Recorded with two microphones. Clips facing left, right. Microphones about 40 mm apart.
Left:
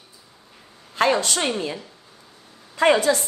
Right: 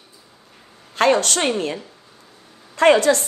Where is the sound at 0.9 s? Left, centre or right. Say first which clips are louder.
Right 3 dB; right.